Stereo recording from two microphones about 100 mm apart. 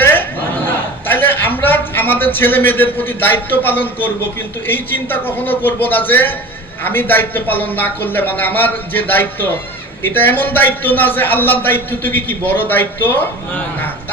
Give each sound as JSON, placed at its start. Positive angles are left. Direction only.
{"t": 0.0, "sound": "chatter", "side_deg": 20}
{"t": 1.0, "sound": "a man's voice", "side_deg": 20}